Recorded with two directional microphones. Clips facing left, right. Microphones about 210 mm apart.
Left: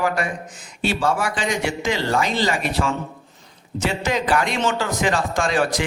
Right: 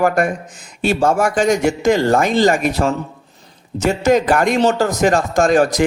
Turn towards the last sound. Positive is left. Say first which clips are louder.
# right 7 dB
turn(degrees=-45)  # may be behind; listen again after turning